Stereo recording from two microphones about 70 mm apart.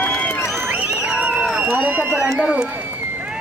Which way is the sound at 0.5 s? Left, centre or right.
Right.